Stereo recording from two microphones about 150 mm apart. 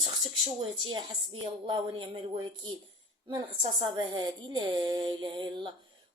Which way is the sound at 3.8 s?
30° right (ahead or behind).